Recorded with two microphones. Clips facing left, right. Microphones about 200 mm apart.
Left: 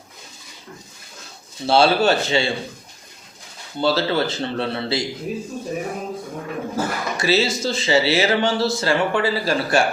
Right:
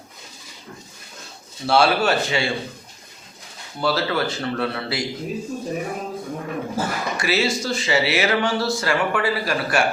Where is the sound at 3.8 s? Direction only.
30° left (ahead or behind).